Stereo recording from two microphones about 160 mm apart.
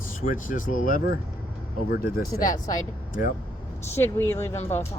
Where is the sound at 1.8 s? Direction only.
70° left (ahead or behind).